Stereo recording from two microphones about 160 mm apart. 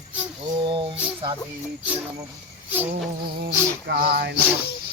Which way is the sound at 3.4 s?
85° right.